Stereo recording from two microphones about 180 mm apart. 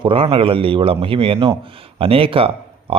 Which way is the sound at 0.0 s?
30° right (ahead or behind).